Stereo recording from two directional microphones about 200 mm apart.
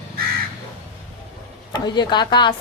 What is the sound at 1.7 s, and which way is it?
Speech, 20° left (ahead or behind).